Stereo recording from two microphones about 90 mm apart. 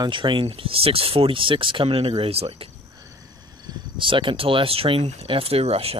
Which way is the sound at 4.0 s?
70° right (ahead or behind).